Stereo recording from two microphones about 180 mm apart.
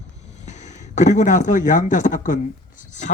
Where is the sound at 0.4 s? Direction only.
40° left (ahead or behind).